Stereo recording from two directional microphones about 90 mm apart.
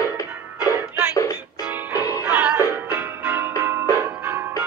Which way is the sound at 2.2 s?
10° right (ahead or behind).